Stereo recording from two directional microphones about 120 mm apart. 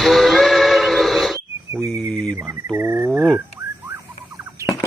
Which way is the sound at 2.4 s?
20° right (ahead or behind).